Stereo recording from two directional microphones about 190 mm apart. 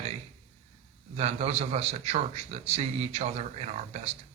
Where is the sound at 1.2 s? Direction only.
35° right (ahead or behind).